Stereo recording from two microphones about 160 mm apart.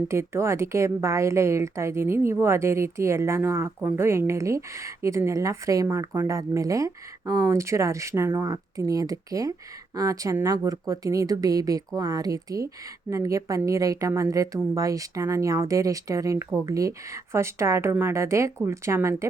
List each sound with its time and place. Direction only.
0.1 s a woman's voice: 15° right (ahead or behind)